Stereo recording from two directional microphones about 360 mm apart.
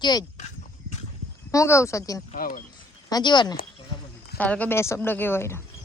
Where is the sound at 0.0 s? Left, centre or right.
Centre.